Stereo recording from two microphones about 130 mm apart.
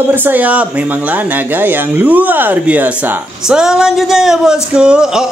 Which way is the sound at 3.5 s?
5° right (ahead or behind).